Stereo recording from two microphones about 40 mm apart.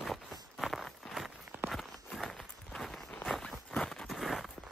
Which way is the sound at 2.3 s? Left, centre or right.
Centre.